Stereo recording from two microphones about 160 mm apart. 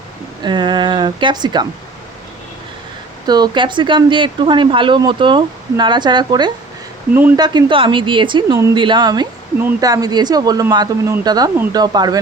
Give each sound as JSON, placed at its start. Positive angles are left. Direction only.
{"t": 0.4, "sound": "speech", "side_deg": -30}
{"t": 3.2, "sound": "speech", "side_deg": -25}